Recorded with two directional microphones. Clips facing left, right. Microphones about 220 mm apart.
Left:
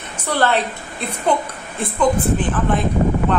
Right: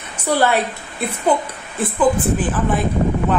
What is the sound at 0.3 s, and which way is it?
Speech, 10° right (ahead or behind).